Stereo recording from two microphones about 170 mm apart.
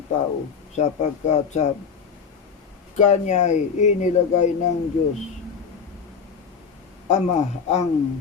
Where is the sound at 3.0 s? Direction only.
45° left (ahead or behind).